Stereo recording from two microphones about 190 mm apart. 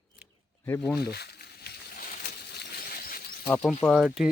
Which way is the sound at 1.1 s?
60° left (ahead or behind).